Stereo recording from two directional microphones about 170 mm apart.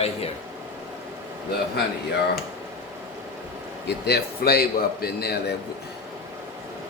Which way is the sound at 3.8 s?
75° left (ahead or behind).